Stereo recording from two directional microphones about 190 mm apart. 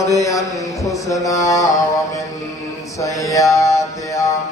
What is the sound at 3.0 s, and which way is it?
Mantra, 15° left (ahead or behind).